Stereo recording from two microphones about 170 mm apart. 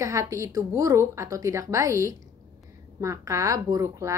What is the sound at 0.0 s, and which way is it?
A woman's voice, 20° right (ahead or behind).